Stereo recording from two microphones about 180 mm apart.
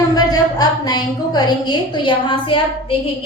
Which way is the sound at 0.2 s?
20° left (ahead or behind).